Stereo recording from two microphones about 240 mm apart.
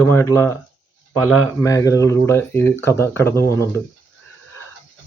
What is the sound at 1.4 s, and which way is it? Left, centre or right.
Speech, centre.